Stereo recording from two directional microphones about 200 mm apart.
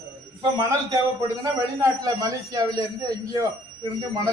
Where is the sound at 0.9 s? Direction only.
15° right (ahead or behind).